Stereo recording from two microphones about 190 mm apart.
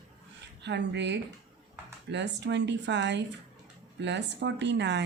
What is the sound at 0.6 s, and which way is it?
A woman's voice, 65° right (ahead or behind).